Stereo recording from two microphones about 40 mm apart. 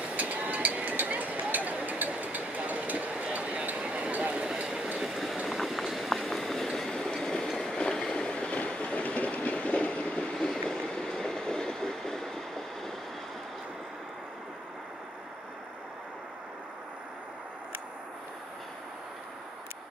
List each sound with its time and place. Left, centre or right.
0.0 s vehicle: right
3.3 s a sound: right
4.9 s train: centre
5.5 s vehicle: centre
7.6 s train: left
10.3 s train: centre